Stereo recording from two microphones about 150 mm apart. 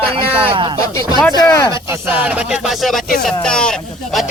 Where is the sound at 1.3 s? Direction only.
20° left (ahead or behind).